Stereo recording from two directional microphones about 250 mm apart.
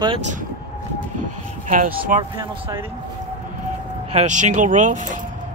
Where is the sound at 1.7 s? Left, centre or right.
Right.